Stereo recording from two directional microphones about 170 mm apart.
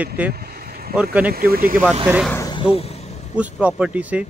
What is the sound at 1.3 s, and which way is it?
Speech, 60° right (ahead or behind).